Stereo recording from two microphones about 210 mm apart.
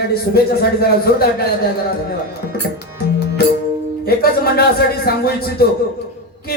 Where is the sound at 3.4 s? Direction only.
45° left (ahead or behind).